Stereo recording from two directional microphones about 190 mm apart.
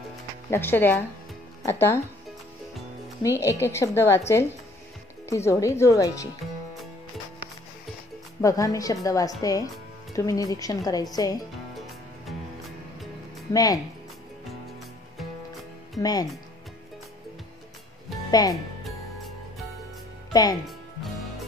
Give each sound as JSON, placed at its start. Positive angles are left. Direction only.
{"t": 0.5, "sound": "a woman's voice", "side_deg": 10}
{"t": 3.2, "sound": "a woman's voice", "side_deg": 15}
{"t": 5.3, "sound": "a woman's voice", "side_deg": 15}
{"t": 8.4, "sound": "a woman's voice", "side_deg": 15}
{"t": 13.5, "sound": "speech", "side_deg": 20}
{"t": 16.0, "sound": "speech", "side_deg": 20}
{"t": 18.3, "sound": "speech", "side_deg": 20}